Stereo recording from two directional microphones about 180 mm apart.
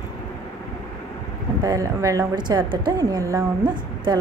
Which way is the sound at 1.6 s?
20° right (ahead or behind).